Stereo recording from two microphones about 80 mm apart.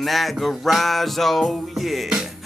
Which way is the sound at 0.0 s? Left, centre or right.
Centre.